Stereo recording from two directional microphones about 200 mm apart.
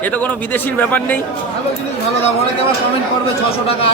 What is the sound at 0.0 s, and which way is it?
A man's voice, 10° left (ahead or behind).